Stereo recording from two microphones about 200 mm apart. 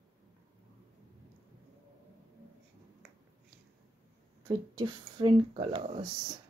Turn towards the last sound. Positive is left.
turn(degrees=-25)  # may be behind; listen again after turning